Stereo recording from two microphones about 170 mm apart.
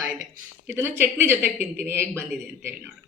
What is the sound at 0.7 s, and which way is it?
Speech, 10° right (ahead or behind).